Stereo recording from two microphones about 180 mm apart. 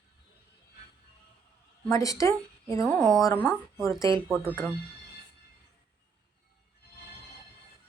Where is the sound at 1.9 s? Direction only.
20° left (ahead or behind).